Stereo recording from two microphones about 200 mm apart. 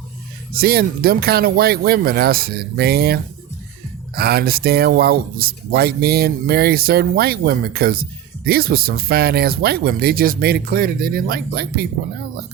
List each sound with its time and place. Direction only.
0.5 s speech: 50° right (ahead or behind)